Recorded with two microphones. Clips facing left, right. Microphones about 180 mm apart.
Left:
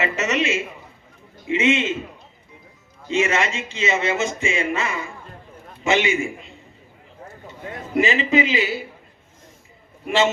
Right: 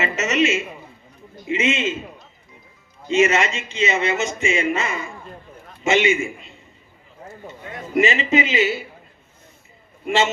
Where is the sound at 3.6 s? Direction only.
20° right (ahead or behind).